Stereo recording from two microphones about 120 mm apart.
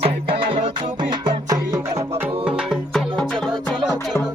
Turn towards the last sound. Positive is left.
turn(degrees=5)  # may be behind; listen again after turning